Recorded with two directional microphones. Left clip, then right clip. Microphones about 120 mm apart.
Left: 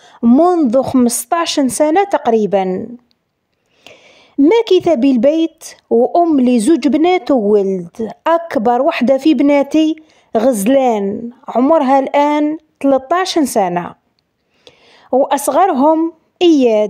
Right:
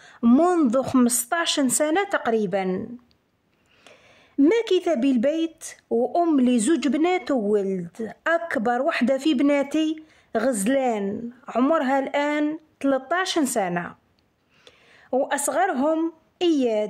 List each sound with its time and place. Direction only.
0.2 s speech: 20° left (ahead or behind)
0.7 s speech: 35° left (ahead or behind)
3.8 s a sound: 35° left (ahead or behind)
4.5 s speech: 40° left (ahead or behind)
11.1 s speech: 25° left (ahead or behind)
11.7 s a woman's voice: 40° left (ahead or behind)
14.6 s a sound: 40° left (ahead or behind)
16.3 s a woman's voice: 45° left (ahead or behind)